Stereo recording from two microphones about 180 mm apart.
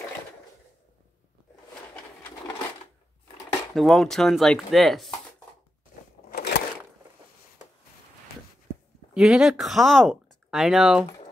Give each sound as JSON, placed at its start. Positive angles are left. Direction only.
{"t": 3.7, "sound": "speech", "side_deg": 0}
{"t": 6.3, "sound": "a sound", "side_deg": 65}
{"t": 9.1, "sound": "speech", "side_deg": -5}